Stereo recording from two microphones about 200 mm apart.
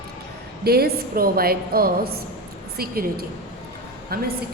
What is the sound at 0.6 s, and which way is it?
A woman's voice, 50° right (ahead or behind).